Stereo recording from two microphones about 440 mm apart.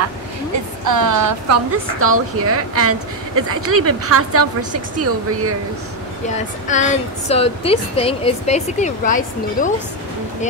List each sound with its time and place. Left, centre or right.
0.8 s a woman's voice: right
6.3 s speech: centre